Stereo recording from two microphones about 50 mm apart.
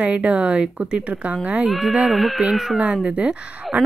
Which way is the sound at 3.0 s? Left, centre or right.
Right.